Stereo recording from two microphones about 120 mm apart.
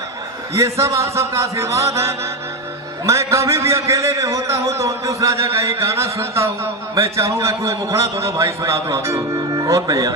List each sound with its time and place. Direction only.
0.5 s a man's voice: 25° right (ahead or behind)